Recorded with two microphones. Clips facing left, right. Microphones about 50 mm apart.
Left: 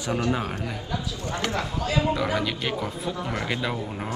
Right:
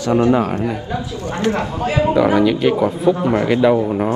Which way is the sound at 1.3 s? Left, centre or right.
Right.